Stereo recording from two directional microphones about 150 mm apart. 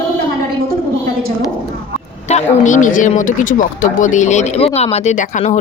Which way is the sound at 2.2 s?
50° left (ahead or behind).